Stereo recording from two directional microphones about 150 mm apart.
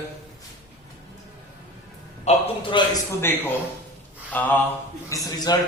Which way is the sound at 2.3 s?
50° left (ahead or behind).